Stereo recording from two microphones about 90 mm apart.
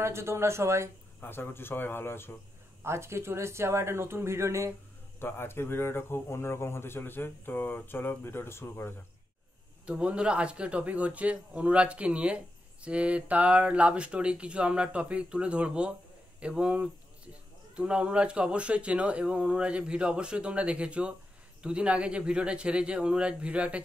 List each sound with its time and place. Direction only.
0.0 s speech: 30° right (ahead or behind)
1.2 s a man's voice: 25° left (ahead or behind)
2.8 s speech: 30° right (ahead or behind)
5.2 s a man's voice: 25° left (ahead or behind)
9.8 s speech: 10° right (ahead or behind)
16.3 s a sound: 10° right (ahead or behind)
17.7 s speech: 10° right (ahead or behind)